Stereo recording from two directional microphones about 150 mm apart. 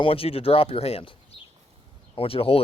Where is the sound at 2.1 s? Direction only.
40° left (ahead or behind).